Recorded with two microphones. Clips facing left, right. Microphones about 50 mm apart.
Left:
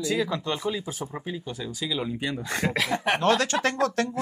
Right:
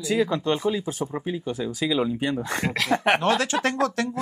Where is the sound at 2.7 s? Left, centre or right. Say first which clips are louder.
Right 3 dB; centre.